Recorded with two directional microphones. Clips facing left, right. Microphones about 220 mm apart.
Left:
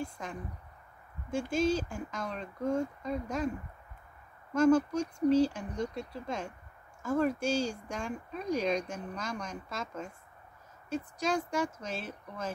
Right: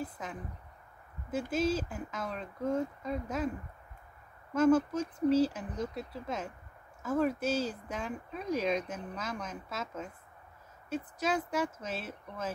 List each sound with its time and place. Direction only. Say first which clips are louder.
0.0 s a sound: left 1 dB; 5° right (ahead or behind)
1.3 s speech: left 1 dB; 5° right (ahead or behind)
4.6 s speech: left 1 dB; 5° right (ahead or behind)